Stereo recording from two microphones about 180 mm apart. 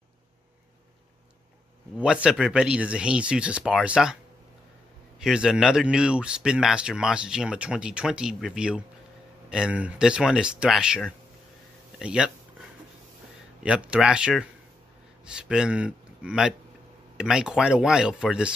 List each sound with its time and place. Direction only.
2.0 s speech: 5° right (ahead or behind)
5.2 s speech: 5° right (ahead or behind)
13.6 s speech: 5° right (ahead or behind)